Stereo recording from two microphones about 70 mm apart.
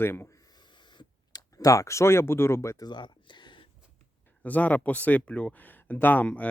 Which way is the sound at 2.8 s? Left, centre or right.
Left.